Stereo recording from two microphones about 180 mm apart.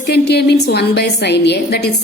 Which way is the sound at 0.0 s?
65° left (ahead or behind).